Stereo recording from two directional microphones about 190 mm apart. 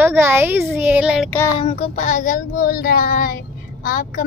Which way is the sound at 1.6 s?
35° left (ahead or behind).